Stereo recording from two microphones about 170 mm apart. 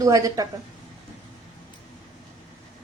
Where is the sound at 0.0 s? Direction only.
20° right (ahead or behind).